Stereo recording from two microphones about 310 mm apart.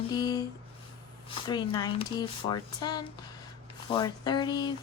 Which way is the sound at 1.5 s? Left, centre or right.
Centre.